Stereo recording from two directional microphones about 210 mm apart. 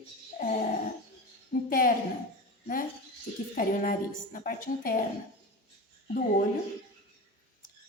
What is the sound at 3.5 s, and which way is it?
A woman's voice, 40° left (ahead or behind).